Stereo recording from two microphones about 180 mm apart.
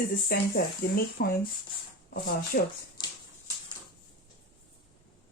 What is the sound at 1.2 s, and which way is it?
Speech, 55° left (ahead or behind).